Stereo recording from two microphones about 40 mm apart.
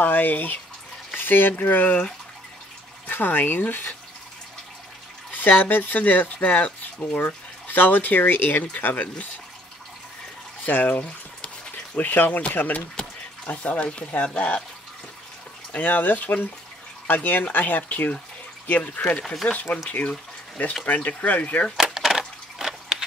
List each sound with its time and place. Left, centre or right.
0.0 s speech: left
3.1 s speech: left
5.3 s speech: left
7.2 s speech: left
10.6 s speech: left
13.5 s speech: left
15.7 s speech: left
19.1 s speech: centre
19.5 s speech: left
21.7 s a sound: centre